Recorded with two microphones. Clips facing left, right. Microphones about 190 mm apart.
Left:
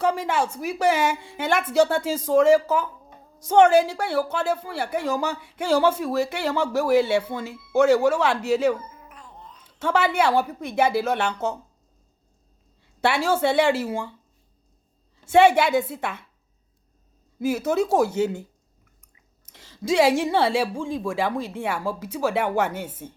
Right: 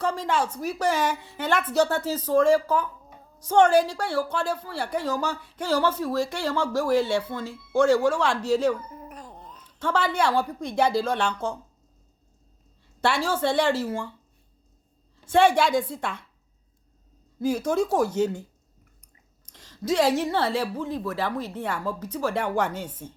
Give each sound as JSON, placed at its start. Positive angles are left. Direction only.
{"t": 0.0, "sound": "a woman's voice", "side_deg": 10}
{"t": 8.9, "sound": "a sound", "side_deg": -40}
{"t": 9.6, "sound": "a woman's voice", "side_deg": 10}
{"t": 13.1, "sound": "a woman's voice", "side_deg": 10}
{"t": 15.2, "sound": "a woman's voice", "side_deg": 10}
{"t": 17.4, "sound": "a woman's voice", "side_deg": 5}
{"t": 19.5, "sound": "a woman's voice", "side_deg": 10}